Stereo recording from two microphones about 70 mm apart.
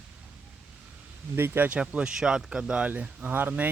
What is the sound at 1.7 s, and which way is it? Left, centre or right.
Speech, centre.